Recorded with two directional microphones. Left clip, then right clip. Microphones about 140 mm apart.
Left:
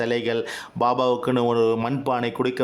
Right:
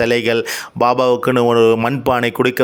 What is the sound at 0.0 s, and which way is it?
A man's voice, 25° right (ahead or behind).